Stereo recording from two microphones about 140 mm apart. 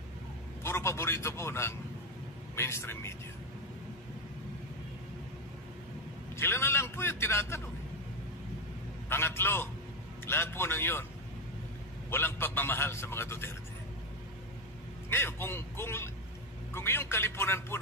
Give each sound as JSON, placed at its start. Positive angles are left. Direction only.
{"t": 0.7, "sound": "a man's voice", "side_deg": 20}
{"t": 6.3, "sound": "a man's voice", "side_deg": 15}
{"t": 9.1, "sound": "a man's voice", "side_deg": 15}
{"t": 12.1, "sound": "a man's voice", "side_deg": 15}
{"t": 15.0, "sound": "a man's voice", "side_deg": 15}